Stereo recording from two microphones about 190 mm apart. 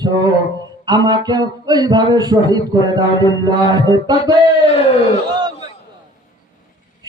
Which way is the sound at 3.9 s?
20° right (ahead or behind).